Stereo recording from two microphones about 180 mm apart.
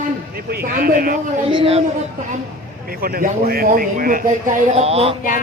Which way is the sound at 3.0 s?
55° right (ahead or behind).